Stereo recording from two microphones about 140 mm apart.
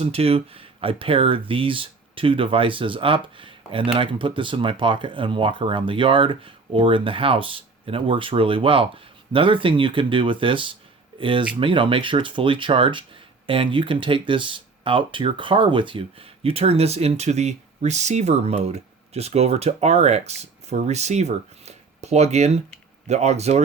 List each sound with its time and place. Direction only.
0.0 s speech: 45° right (ahead or behind)